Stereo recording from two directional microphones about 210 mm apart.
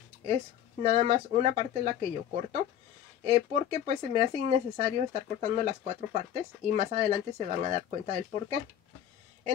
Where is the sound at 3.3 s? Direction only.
30° right (ahead or behind).